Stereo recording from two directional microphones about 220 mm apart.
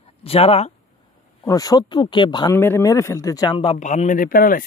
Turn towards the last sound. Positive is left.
turn(degrees=40)  # may be behind; listen again after turning